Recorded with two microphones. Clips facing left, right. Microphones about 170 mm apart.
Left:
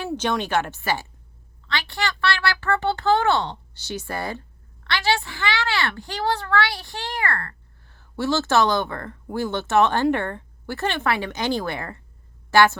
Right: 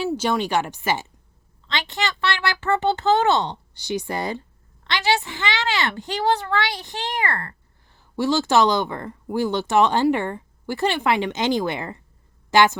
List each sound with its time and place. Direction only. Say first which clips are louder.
0.0 s a woman's voice: right 2 dB; 10° right (ahead or behind)